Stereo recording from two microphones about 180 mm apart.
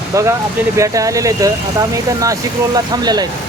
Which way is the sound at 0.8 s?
20° right (ahead or behind).